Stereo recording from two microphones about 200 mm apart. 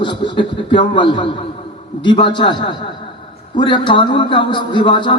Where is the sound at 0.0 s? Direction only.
25° left (ahead or behind).